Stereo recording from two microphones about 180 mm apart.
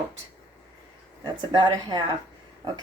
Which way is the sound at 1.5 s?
25° right (ahead or behind).